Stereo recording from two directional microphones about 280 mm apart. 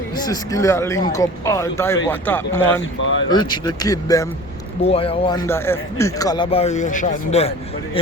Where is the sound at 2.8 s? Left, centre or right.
Left.